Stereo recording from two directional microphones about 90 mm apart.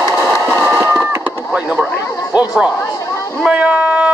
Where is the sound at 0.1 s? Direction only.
20° right (ahead or behind).